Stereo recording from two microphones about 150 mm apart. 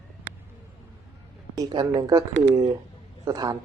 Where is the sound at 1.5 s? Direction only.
25° right (ahead or behind).